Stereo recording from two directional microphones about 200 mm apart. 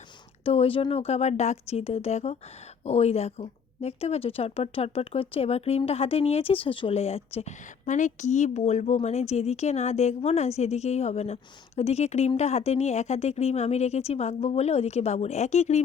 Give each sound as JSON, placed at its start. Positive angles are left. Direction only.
{"t": 0.4, "sound": "speech", "side_deg": 30}